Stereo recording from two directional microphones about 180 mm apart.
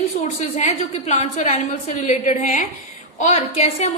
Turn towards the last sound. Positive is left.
turn(degrees=35)  # may be behind; listen again after turning